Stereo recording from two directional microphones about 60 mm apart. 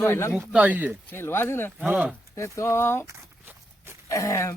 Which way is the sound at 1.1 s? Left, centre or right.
Left.